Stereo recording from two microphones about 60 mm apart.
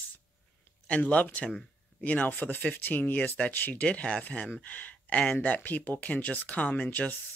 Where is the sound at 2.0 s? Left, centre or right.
Left.